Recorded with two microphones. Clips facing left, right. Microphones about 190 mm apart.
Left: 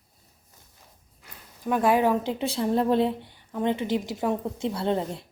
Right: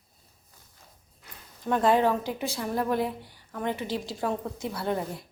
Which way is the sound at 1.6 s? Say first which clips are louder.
Left 1 dB; 10° left (ahead or behind).